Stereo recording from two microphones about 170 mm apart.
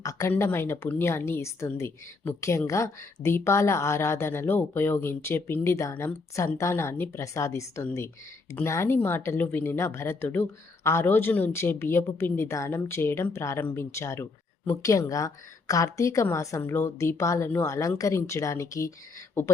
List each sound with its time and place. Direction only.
0.0 s speech: 20° left (ahead or behind)